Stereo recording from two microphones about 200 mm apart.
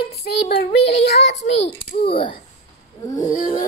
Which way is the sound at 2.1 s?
25° left (ahead or behind).